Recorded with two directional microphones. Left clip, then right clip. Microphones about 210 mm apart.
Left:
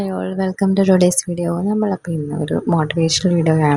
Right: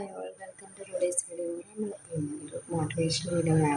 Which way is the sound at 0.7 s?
45° left (ahead or behind).